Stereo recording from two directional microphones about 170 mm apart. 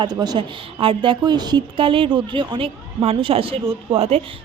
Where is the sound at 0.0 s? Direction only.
25° right (ahead or behind).